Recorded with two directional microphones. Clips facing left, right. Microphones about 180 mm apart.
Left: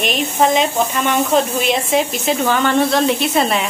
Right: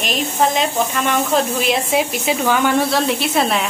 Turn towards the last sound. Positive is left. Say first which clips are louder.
# left 1 dB
turn(degrees=0)  # may be behind; listen again after turning